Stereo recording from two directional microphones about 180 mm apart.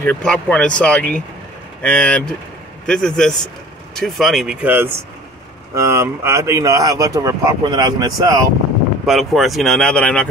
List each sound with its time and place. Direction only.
0.0 s speech: 5° left (ahead or behind); by 8.5 s 20° right (ahead or behind)
9.0 s speech: centre (ahead or behind)